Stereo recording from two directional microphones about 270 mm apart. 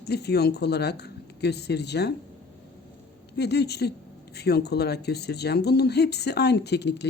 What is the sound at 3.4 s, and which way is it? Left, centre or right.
Speech, left.